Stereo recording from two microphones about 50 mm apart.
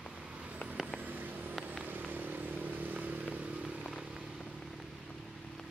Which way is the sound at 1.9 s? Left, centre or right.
Right.